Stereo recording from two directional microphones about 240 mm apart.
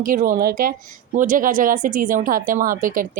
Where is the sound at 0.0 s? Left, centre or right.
Right.